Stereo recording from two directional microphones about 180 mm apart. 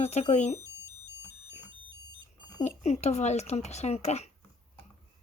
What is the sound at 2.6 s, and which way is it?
Speech, 40° left (ahead or behind).